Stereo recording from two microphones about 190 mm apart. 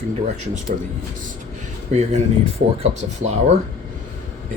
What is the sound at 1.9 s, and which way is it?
Speech, 35° right (ahead or behind).